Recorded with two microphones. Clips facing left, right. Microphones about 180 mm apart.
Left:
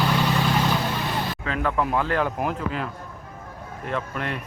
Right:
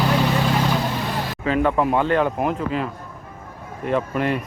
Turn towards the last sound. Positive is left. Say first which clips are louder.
# right 7 dB
turn(degrees=-5)  # may be behind; listen again after turning